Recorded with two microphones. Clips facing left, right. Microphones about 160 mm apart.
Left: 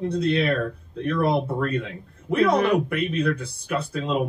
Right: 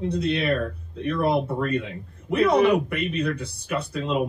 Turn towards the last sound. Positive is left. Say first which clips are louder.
# even
turn(degrees=-5)  # may be behind; listen again after turning